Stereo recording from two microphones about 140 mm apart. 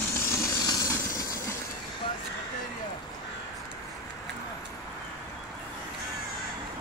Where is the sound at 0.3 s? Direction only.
25° left (ahead or behind).